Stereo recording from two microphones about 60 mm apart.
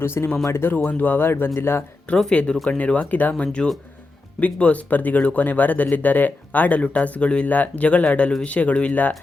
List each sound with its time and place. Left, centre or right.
0.0 s speech: left
2.0 s speech: centre
3.3 s speech: centre